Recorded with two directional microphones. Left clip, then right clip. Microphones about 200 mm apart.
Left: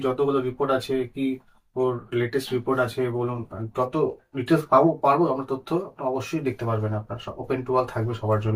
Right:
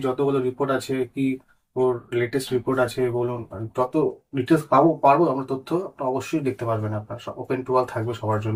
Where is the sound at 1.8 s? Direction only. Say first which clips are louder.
Right 2 dB; 15° right (ahead or behind).